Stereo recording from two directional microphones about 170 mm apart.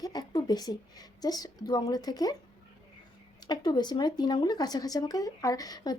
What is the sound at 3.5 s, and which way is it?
Speech, 25° left (ahead or behind).